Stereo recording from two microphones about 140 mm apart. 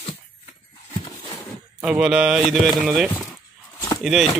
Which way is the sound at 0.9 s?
25° left (ahead or behind).